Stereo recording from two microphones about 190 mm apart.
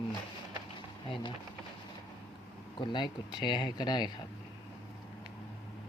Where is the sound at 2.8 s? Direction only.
25° left (ahead or behind).